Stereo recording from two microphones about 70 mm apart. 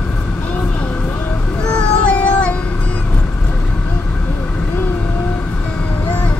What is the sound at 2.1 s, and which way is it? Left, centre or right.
Child singing, centre.